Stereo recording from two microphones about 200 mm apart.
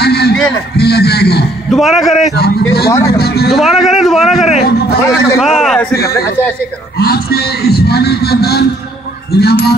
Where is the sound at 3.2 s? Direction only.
50° left (ahead or behind).